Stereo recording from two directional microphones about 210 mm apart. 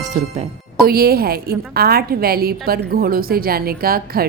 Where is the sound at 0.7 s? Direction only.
45° right (ahead or behind).